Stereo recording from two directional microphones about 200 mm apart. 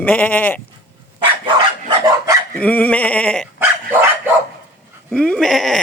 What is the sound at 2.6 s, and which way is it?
Speech, 5° left (ahead or behind).